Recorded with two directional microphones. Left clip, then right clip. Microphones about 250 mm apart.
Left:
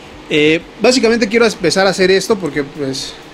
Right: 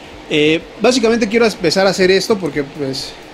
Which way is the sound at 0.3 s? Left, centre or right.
Centre.